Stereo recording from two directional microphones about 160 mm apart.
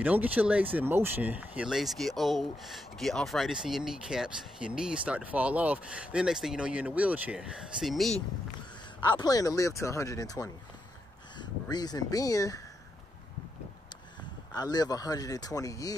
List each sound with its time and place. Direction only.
0.0 s speech: 10° right (ahead or behind)
9.1 s speech: 25° left (ahead or behind)
11.7 s speech: 25° left (ahead or behind)
14.5 s speech: 25° left (ahead or behind)